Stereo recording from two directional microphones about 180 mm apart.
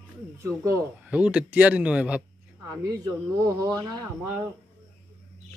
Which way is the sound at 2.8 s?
20° right (ahead or behind).